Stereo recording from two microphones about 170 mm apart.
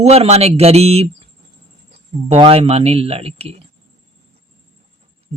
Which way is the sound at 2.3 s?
35° right (ahead or behind).